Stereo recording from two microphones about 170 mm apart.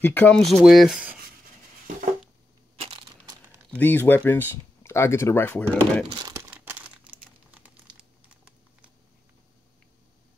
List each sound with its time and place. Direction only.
0.0 s speech: 10° left (ahead or behind)
0.7 s rub: centre (ahead or behind)
2.7 s crushing: 35° right (ahead or behind)
3.7 s speech: 10° left (ahead or behind)
6.0 s speech: 25° right (ahead or behind)
6.5 s crumpling: 10° right (ahead or behind)